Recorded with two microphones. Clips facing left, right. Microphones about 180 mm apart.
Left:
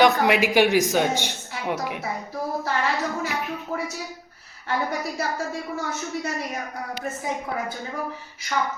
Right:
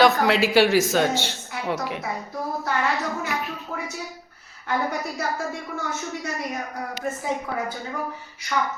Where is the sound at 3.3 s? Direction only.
20° left (ahead or behind).